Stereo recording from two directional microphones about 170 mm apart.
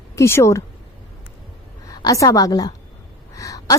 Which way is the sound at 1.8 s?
20° left (ahead or behind).